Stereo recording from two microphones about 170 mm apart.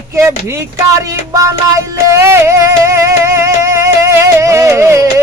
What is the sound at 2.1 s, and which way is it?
Music, 15° right (ahead or behind).